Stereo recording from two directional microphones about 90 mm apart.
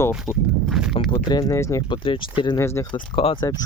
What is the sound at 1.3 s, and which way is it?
Speech, 45° left (ahead or behind).